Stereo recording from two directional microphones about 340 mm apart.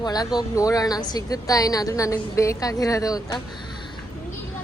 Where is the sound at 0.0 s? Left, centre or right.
Centre.